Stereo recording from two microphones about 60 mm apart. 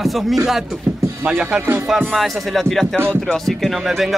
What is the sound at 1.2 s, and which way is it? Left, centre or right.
Speech, centre.